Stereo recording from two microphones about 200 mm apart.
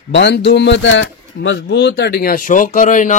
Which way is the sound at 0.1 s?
60° left (ahead or behind).